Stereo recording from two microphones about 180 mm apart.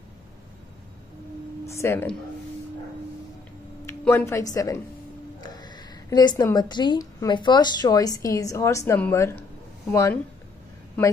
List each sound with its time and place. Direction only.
1.7 s speech: 15° left (ahead or behind)
3.8 s a woman's voice: 15° left (ahead or behind)